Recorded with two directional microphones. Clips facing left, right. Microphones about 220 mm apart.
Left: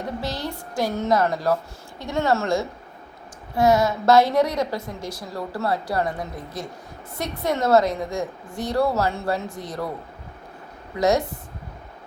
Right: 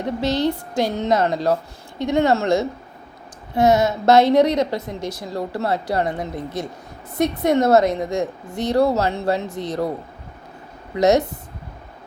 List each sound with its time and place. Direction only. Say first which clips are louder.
0.2 s a woman's voice: right 9 dB; 20° right (ahead or behind)